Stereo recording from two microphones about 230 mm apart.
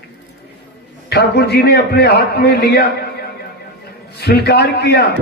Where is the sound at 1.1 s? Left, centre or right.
Left.